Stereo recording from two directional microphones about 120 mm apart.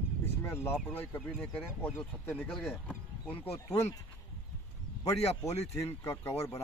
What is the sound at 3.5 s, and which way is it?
Speech, 25° left (ahead or behind).